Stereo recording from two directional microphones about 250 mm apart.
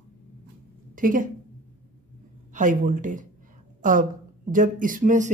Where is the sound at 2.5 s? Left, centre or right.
Right.